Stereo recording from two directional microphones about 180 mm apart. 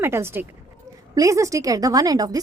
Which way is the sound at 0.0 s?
15° right (ahead or behind).